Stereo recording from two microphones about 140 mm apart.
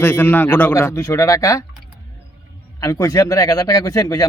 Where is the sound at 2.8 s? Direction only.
25° left (ahead or behind).